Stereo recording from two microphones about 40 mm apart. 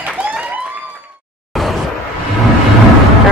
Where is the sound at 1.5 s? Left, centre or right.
Centre.